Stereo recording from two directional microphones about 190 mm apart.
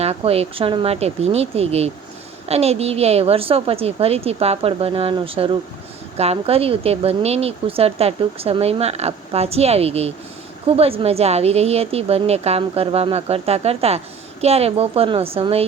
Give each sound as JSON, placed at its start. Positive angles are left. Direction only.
{"t": 0.0, "sound": "speech", "side_deg": -30}